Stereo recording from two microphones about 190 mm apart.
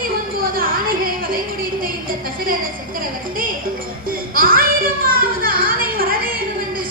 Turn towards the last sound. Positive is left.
turn(degrees=-50)  # may be behind; listen again after turning